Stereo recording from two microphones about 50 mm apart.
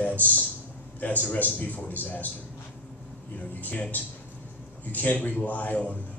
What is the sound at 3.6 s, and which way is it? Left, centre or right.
A man's voice, left.